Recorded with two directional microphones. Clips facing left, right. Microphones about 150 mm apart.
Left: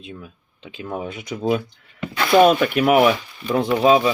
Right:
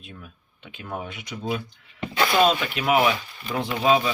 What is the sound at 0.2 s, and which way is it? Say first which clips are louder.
Speech: left 5 dB; 30° left (ahead or behind).